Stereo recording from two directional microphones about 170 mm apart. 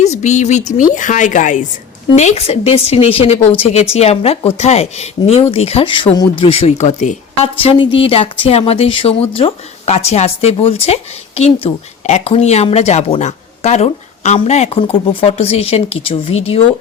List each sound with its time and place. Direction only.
0.0 s a woman's voice: 40° left (ahead or behind)